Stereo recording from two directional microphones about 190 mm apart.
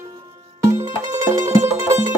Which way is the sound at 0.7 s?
15° right (ahead or behind).